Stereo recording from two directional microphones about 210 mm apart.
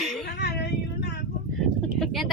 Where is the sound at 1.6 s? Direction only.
Centre (ahead or behind).